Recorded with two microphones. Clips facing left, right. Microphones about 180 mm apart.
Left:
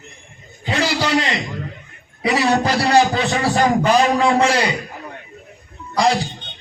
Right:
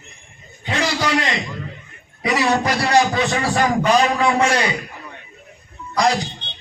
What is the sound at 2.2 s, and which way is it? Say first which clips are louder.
A man's voice: left 1 dB; 30° left (ahead or behind).